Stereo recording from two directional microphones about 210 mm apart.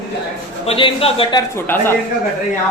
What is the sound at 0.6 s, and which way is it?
Speech, 25° left (ahead or behind).